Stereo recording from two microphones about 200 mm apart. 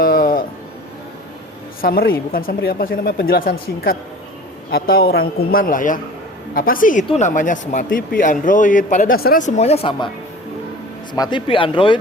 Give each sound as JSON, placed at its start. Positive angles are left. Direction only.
{"t": 0.0, "sound": "a sound", "side_deg": 45}
{"t": 1.8, "sound": "speech", "side_deg": 45}
{"t": 11.1, "sound": "speech", "side_deg": 20}